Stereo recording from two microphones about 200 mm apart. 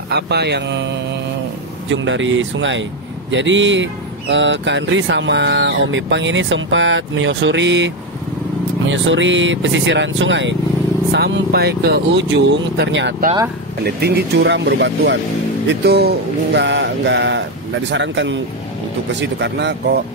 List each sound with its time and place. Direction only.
0.1 s speech: 55° right (ahead or behind)